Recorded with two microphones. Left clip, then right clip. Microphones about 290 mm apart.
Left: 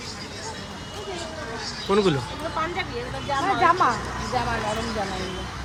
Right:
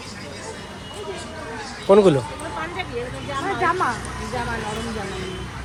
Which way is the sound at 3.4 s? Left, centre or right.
Left.